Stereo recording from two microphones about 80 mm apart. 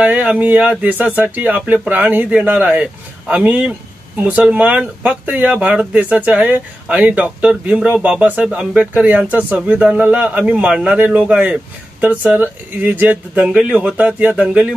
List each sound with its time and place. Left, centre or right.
0.0 s speech: centre